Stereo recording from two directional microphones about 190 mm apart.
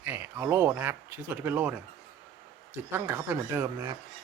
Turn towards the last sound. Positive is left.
turn(degrees=-15)  # may be behind; listen again after turning